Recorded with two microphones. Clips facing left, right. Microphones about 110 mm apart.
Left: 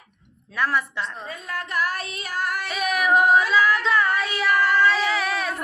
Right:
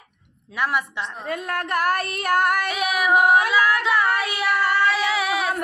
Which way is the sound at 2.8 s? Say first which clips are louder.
Left 1 dB; 10° right (ahead or behind).